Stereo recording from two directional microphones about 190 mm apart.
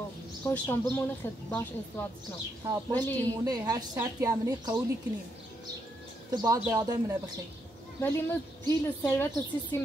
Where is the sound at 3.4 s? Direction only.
20° right (ahead or behind).